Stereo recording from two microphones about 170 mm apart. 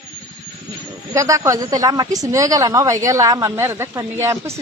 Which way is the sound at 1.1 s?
20° right (ahead or behind).